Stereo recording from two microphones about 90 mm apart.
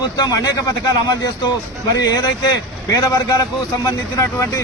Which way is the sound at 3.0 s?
40° left (ahead or behind).